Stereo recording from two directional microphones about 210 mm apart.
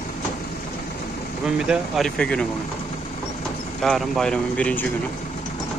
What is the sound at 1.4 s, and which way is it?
Speech, 5° right (ahead or behind).